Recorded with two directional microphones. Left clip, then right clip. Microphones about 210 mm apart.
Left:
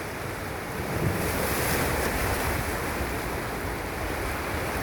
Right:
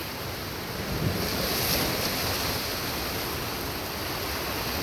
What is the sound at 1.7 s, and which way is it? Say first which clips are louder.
Waves: left 1 dB; 40° left (ahead or behind).